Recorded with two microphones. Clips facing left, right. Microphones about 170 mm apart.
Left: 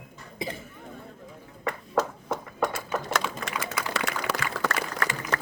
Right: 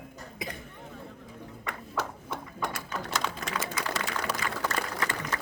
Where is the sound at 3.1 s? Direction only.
65° left (ahead or behind).